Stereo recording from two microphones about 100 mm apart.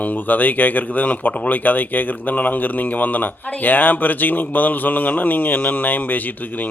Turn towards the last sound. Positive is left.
turn(degrees=15)  # may be behind; listen again after turning